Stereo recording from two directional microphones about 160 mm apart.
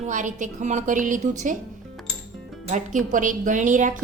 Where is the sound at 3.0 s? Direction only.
55° right (ahead or behind).